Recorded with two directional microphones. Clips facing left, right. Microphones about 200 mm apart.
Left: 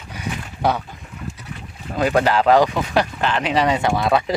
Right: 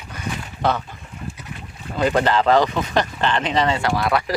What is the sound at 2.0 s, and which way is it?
Speech, 10° left (ahead or behind).